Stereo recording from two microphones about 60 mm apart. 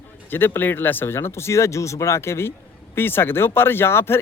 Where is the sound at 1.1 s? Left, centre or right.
Left.